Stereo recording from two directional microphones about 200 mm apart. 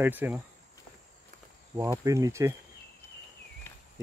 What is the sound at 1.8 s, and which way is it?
Speech, 15° right (ahead or behind).